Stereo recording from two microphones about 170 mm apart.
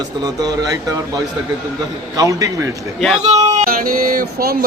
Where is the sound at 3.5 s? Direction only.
55° right (ahead or behind).